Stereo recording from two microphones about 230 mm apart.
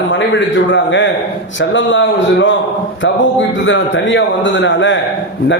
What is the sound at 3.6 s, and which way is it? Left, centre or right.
A man's voice, left.